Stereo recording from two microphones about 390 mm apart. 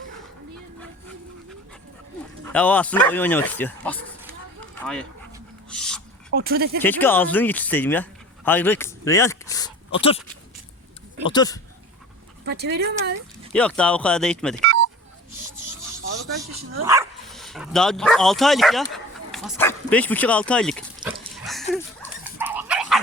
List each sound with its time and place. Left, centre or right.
2.4 s speech: centre
5.7 s a sound: centre
6.3 s speech: right
6.8 s speech: centre
8.4 s a sound: centre
11.3 s speech: centre
12.5 s speech: right
13.5 s speech: centre
14.6 s telephone dialing: right
16.8 s speech: centre
21.7 s dog: centre
22.2 s dog: centre